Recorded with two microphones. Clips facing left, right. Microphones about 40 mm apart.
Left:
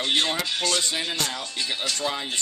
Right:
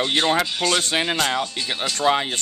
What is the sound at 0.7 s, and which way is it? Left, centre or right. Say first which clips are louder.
Speech: right 5 dB; right.